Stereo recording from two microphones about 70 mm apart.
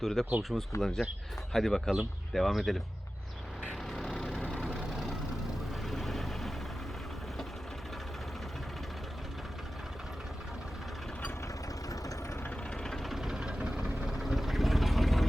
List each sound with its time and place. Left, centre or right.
0.0 s speech: centre
3.9 s vehicle: centre
4.4 s vehicle: centre
5.9 s vehicle: centre
11.9 s vehicle: left
12.7 s vehicle: centre
14.2 s vehicle: centre